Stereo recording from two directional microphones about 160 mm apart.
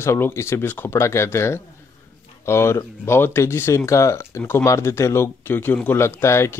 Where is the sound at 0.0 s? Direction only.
15° left (ahead or behind).